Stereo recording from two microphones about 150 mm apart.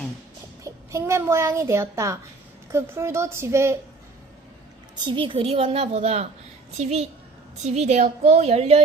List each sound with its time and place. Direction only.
0.6 s a woman's voice: 20° right (ahead or behind)
4.9 s a woman's voice: 30° right (ahead or behind)